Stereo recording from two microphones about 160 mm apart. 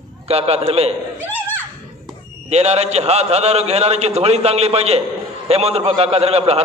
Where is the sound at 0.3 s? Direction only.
40° right (ahead or behind).